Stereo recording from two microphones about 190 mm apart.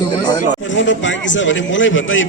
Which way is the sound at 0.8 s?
75° left (ahead or behind).